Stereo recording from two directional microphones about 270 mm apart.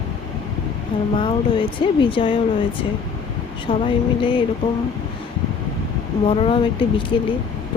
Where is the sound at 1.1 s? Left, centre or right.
Centre.